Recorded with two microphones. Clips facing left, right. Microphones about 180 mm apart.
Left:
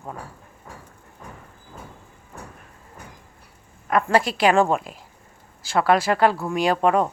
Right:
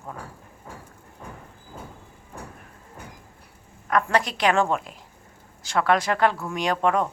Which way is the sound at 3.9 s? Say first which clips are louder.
Left 3 dB; 5° left (ahead or behind).